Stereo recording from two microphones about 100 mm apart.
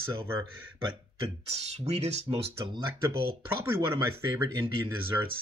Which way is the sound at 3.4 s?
25° right (ahead or behind).